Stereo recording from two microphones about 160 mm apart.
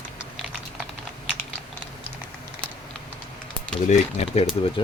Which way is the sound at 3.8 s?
45° left (ahead or behind).